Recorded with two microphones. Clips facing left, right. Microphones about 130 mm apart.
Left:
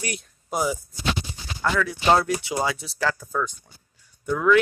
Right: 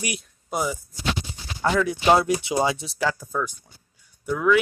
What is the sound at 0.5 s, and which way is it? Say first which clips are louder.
Speech: left 1 dB; centre (ahead or behind).